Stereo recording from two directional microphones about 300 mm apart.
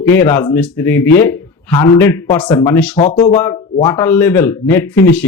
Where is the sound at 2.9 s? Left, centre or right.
Left.